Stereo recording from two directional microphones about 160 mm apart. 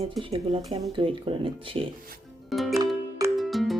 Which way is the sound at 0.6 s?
Centre (ahead or behind).